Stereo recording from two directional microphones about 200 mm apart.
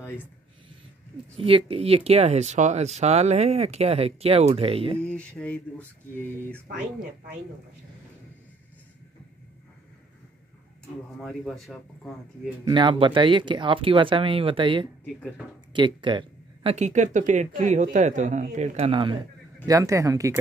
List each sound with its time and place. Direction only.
1.3 s speech: 25° right (ahead or behind)
5.0 s a sound: 5° left (ahead or behind)
11.1 s speech: centre (ahead or behind)
12.6 s speech: 25° right (ahead or behind)
16.7 s speech: 35° right (ahead or behind); by 20.3 s 15° right (ahead or behind)